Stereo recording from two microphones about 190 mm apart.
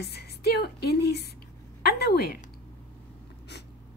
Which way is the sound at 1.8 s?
55° left (ahead or behind).